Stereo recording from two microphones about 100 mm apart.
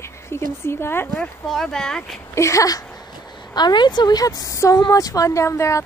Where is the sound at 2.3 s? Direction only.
30° left (ahead or behind).